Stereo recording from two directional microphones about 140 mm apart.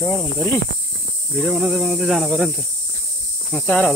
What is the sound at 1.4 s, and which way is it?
Speech, centre (ahead or behind).